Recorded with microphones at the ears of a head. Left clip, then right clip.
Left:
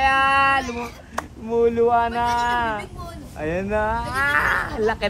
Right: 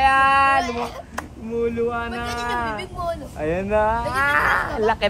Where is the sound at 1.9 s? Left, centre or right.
Left.